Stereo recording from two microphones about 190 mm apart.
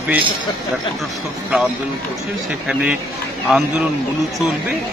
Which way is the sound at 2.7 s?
5° right (ahead or behind).